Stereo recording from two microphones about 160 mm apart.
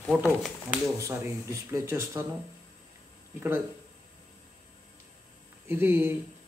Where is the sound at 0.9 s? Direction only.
20° right (ahead or behind).